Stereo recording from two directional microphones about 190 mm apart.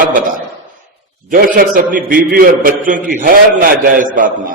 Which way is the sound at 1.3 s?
45° right (ahead or behind).